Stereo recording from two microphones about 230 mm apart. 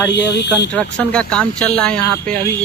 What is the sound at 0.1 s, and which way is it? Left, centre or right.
Speech, left.